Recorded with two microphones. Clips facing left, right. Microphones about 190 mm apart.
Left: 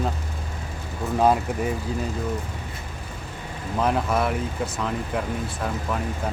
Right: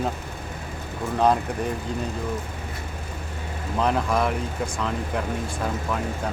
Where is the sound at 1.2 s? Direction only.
5° left (ahead or behind).